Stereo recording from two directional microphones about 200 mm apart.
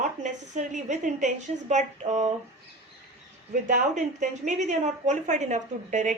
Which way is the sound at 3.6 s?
40° right (ahead or behind).